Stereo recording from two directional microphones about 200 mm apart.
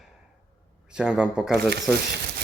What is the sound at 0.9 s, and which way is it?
Speech, 5° right (ahead or behind).